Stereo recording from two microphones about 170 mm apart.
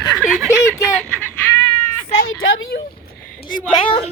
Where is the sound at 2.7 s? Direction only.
60° left (ahead or behind).